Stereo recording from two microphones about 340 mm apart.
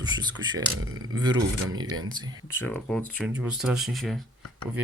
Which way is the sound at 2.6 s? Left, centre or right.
Centre.